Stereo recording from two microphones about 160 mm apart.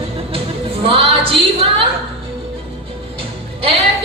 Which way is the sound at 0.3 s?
35° right (ahead or behind).